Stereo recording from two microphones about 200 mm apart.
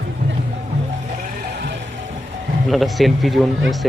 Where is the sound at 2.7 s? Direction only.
Centre (ahead or behind).